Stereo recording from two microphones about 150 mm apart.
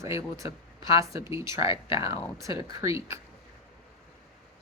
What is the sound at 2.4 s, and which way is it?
Speech, 20° right (ahead or behind).